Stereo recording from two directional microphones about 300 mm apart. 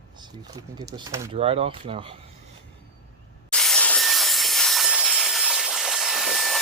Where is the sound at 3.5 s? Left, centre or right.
Centre.